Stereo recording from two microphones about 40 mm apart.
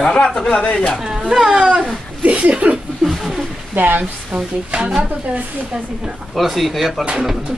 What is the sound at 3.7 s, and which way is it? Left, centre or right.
Speech, right.